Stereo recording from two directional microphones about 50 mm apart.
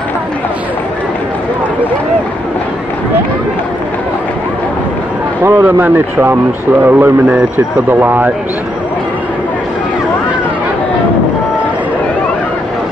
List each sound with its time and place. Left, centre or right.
5.4 s speech: right